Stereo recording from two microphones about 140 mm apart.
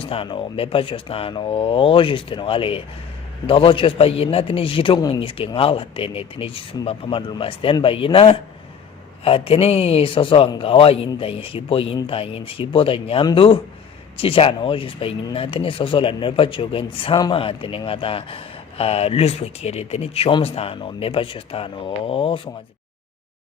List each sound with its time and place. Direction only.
0.0 s speech: 40° left (ahead or behind)
5.2 s speech: 40° left (ahead or behind)